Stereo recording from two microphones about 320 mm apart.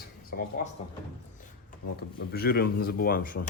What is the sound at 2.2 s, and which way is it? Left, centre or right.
Speech, left.